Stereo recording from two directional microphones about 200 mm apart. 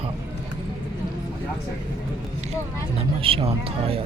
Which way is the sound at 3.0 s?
30° right (ahead or behind).